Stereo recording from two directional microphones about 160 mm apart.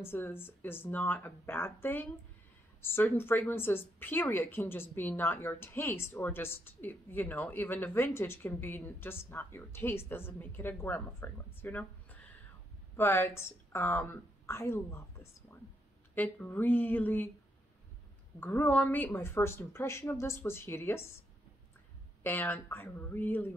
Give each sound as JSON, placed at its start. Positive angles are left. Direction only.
{"t": 0.0, "sound": "a woman's voice", "side_deg": 15}
{"t": 16.2, "sound": "a woman's voice", "side_deg": 10}
{"t": 18.4, "sound": "a woman's voice", "side_deg": 10}
{"t": 22.2, "sound": "a woman's voice", "side_deg": 10}